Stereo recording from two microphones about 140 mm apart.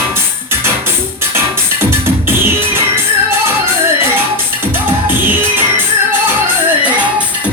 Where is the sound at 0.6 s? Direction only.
15° right (ahead or behind).